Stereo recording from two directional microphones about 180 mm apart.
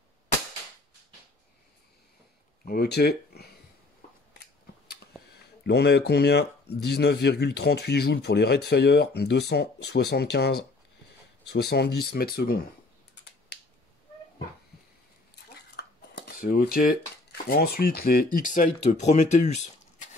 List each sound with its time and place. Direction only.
2.6 s speech: 60° left (ahead or behind)
5.6 s speech: 65° left (ahead or behind)
13.1 s finger snapping: 65° left (ahead or behind)
15.3 s speech: 65° left (ahead or behind); by 20.1 s 40° left (ahead or behind)